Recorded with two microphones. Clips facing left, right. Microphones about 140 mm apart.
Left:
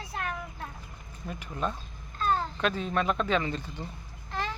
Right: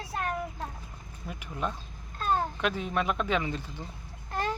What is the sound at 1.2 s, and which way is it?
Speech, 10° right (ahead or behind).